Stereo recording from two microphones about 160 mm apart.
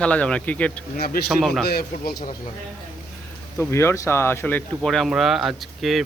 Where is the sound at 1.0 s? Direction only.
70° left (ahead or behind).